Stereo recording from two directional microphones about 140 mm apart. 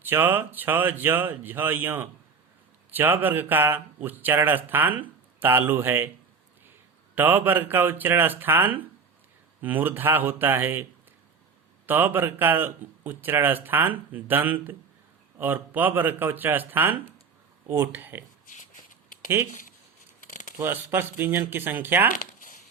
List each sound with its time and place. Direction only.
0.0 s speech: 15° right (ahead or behind)
7.2 s speech: 15° right (ahead or behind)
11.9 s speech: 15° right (ahead or behind)
20.6 s speech: 15° right (ahead or behind)
22.1 s a sound: 70° left (ahead or behind)